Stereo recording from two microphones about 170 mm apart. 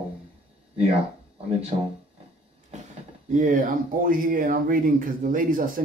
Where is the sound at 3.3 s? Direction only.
50° right (ahead or behind).